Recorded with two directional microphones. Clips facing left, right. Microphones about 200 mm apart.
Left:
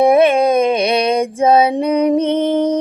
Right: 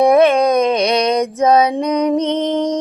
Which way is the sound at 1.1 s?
30° left (ahead or behind).